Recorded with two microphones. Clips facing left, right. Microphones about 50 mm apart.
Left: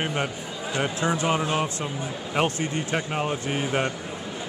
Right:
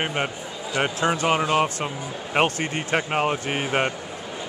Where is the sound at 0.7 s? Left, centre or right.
Right.